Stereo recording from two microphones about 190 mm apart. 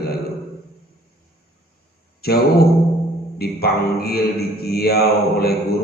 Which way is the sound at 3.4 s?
55° left (ahead or behind).